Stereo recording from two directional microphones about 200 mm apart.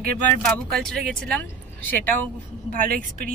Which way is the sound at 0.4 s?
Centre (ahead or behind).